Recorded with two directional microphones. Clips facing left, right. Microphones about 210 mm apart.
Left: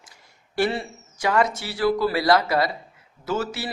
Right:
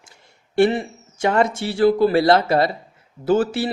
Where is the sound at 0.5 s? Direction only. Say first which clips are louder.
Right 7 dB; 20° right (ahead or behind).